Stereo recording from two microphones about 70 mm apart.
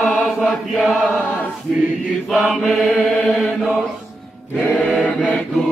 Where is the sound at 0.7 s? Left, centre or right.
Centre.